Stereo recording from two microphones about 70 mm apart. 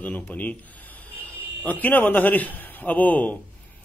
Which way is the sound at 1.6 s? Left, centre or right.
Left.